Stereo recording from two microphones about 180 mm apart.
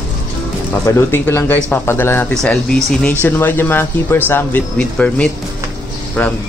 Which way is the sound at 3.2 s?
10° left (ahead or behind).